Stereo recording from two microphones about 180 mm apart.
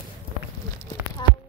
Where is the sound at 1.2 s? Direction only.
25° left (ahead or behind).